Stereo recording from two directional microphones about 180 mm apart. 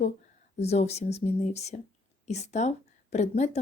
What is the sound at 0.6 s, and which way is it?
A woman's voice, 35° left (ahead or behind).